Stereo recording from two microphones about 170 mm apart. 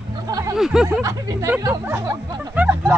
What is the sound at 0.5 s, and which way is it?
Speech, 5° right (ahead or behind).